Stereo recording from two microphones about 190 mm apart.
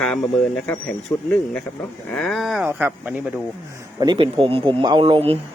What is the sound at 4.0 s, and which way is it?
Speech, 25° right (ahead or behind).